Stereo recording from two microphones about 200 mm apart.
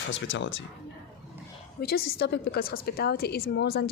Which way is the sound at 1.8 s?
50° left (ahead or behind).